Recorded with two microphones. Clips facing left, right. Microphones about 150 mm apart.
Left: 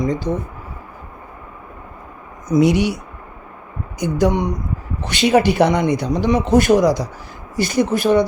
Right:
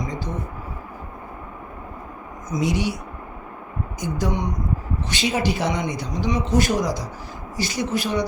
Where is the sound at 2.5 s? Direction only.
65° left (ahead or behind).